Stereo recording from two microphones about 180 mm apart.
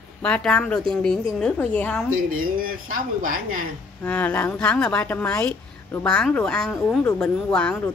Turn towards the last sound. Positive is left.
turn(degrees=5)  # may be behind; listen again after turning